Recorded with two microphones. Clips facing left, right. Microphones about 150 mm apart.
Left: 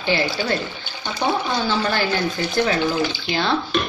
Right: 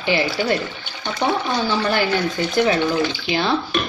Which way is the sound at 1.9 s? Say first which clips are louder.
Right 2 dB; 20° right (ahead or behind).